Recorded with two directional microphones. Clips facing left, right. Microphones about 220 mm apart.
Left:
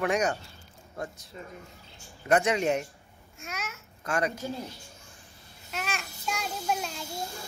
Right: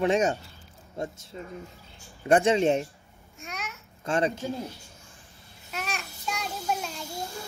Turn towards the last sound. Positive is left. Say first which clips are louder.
# even
turn(degrees=0)  # may be behind; listen again after turning